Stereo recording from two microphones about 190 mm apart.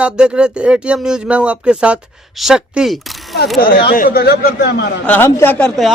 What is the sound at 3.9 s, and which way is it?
Speech, 50° left (ahead or behind).